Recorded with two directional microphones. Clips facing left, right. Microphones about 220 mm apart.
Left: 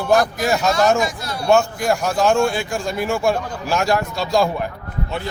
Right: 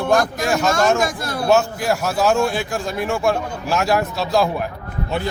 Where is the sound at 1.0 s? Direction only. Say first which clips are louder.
Right 2 dB; 50° right (ahead or behind).